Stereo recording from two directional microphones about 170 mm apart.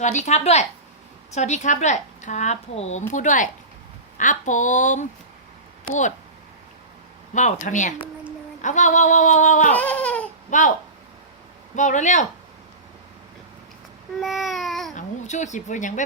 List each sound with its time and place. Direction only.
0.0 s speech: 45° left (ahead or behind)
7.3 s speech: 45° left (ahead or behind)
9.7 s a sound: 10° left (ahead or behind)
10.5 s speech: 45° left (ahead or behind)
11.8 s speech: 45° left (ahead or behind)
14.2 s babbling: centre (ahead or behind)
14.9 s speech: 45° left (ahead or behind)